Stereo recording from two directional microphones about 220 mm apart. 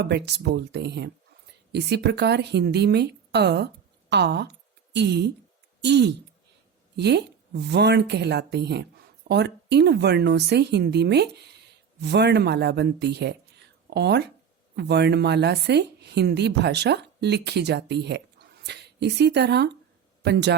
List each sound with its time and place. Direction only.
0.1 s a woman's voice: 50° right (ahead or behind)